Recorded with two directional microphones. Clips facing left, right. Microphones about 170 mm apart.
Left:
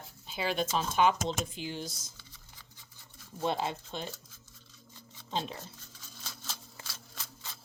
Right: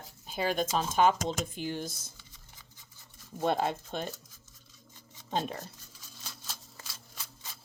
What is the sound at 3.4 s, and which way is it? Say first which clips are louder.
Speech: right 3 dB; 50° right (ahead or behind).